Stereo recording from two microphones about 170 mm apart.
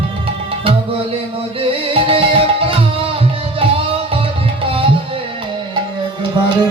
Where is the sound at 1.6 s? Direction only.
35° right (ahead or behind).